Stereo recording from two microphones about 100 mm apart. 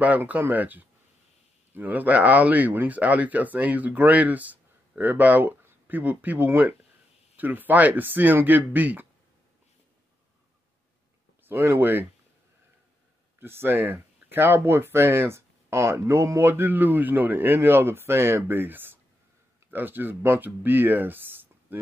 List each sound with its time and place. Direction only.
0.0 s speech: 15° right (ahead or behind)
11.4 s speech: 25° right (ahead or behind)
13.4 s speech: 20° right (ahead or behind)